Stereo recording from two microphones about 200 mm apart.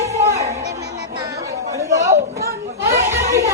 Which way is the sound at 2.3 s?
50° right (ahead or behind).